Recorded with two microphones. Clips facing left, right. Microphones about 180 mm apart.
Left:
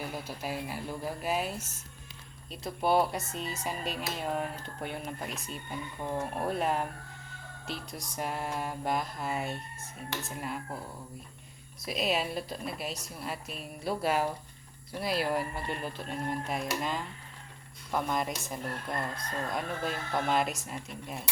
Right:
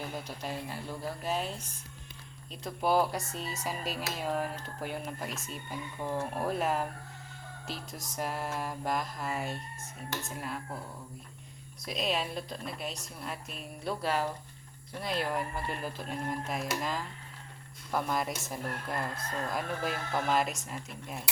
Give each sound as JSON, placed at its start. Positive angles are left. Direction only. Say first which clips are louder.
{"t": 0.0, "sound": "speech", "louder": "left 1 dB", "side_deg": 10}
{"t": 11.9, "sound": "speech", "louder": "left 2 dB", "side_deg": 5}